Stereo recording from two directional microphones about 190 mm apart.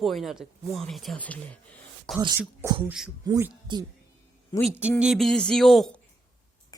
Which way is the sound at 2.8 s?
5° right (ahead or behind).